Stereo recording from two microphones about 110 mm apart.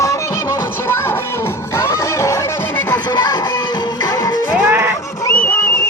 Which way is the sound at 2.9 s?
40° left (ahead or behind).